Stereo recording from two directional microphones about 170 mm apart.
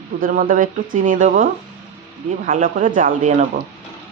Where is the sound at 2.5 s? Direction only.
50° right (ahead or behind).